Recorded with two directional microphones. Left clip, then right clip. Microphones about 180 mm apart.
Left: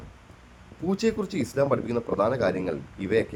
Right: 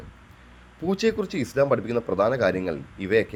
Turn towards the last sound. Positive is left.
turn(degrees=-15)  # may be behind; listen again after turning